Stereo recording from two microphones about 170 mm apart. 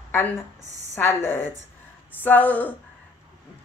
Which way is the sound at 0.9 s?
15° left (ahead or behind).